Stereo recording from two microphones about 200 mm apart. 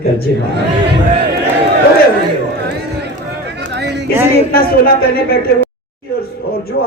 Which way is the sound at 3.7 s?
55° right (ahead or behind).